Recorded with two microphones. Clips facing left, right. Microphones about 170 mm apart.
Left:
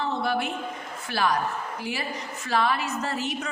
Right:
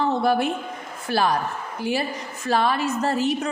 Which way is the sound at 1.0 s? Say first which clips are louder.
Right 3 dB; 35° right (ahead or behind).